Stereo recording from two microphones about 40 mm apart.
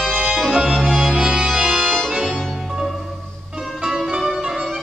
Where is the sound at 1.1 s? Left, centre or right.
Right.